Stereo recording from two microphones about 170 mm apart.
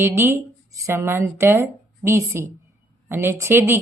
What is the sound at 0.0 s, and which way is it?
Speech, 15° right (ahead or behind).